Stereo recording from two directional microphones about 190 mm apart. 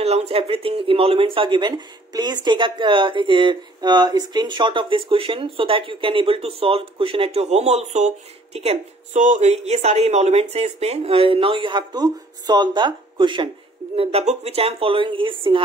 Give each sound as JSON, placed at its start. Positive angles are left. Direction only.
{"t": 0.0, "sound": "speech", "side_deg": -35}